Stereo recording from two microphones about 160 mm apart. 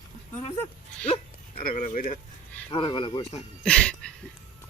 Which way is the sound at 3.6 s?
5° left (ahead or behind).